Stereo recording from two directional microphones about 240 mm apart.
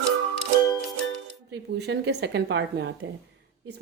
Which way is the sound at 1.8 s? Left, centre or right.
Right.